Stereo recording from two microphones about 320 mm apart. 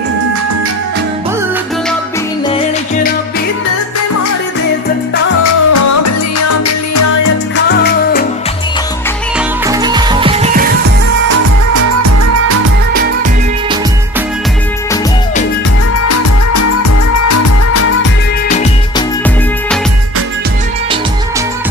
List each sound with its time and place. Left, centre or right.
5.4 s music: left
7.7 s music: left
9.7 s music: centre
11.2 s music: right
17.2 s music: left